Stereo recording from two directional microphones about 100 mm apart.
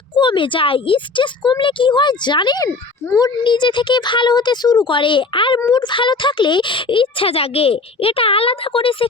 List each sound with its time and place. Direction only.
0.2 s speech: 55° left (ahead or behind)